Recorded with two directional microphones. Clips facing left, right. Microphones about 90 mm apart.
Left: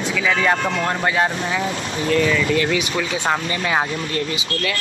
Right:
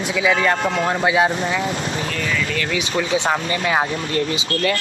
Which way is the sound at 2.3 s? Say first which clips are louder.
Left 4 dB; 35° left (ahead or behind).